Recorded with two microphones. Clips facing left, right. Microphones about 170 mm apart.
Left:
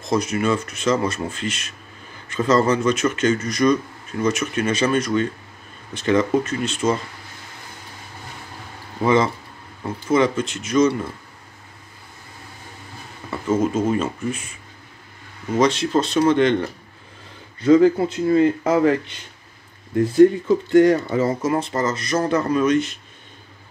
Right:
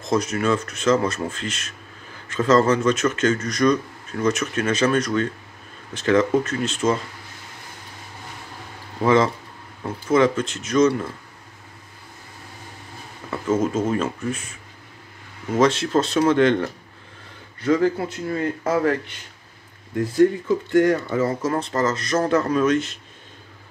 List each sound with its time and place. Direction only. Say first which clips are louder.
0.1 s speech: left 1 dB; centre (ahead or behind)
9.0 s speech: even; centre (ahead or behind)
13.3 s speech: left 1 dB; centre (ahead or behind)
15.5 s speech: even; 5° right (ahead or behind)
17.6 s speech: left 6 dB; 20° left (ahead or behind)
20.0 s speech: left 4 dB; 20° left (ahead or behind)
21.5 s speech: left 1 dB; 5° left (ahead or behind)